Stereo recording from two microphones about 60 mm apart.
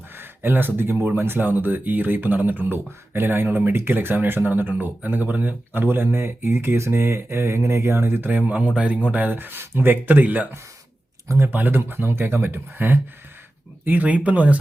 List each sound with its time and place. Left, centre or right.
0.2 s speech: right